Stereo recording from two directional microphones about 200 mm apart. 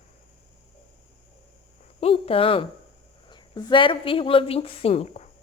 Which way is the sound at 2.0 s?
30° left (ahead or behind).